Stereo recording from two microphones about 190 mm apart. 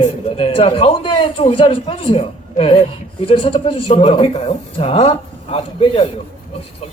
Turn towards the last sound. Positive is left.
turn(degrees=30)  # may be behind; listen again after turning